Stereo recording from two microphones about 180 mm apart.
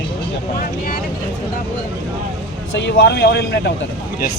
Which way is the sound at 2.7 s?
75° left (ahead or behind).